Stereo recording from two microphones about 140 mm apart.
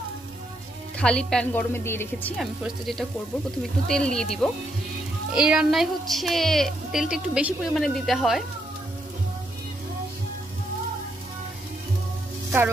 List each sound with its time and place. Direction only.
0.9 s speech: 5° left (ahead or behind)
2.3 s speech: centre (ahead or behind)
5.3 s speech: 5° right (ahead or behind)